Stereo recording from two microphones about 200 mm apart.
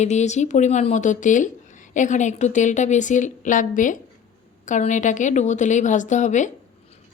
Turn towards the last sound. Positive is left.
turn(degrees=35)  # may be behind; listen again after turning